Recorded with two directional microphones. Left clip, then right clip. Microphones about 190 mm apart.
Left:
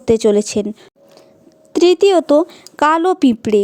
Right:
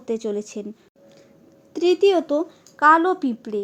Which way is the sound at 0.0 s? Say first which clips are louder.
Left 13 dB; 45° left (ahead or behind).